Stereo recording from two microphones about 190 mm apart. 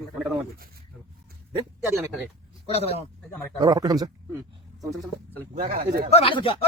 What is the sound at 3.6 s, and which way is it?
Speech, 20° right (ahead or behind).